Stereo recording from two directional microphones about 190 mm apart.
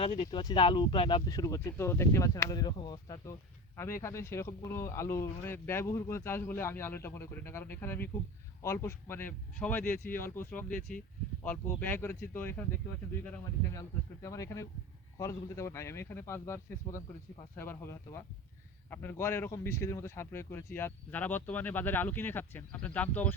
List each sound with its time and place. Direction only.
0.0 s speech: 35° left (ahead or behind)
0.3 s speech: 25° left (ahead or behind)
13.7 s speech: 15° left (ahead or behind)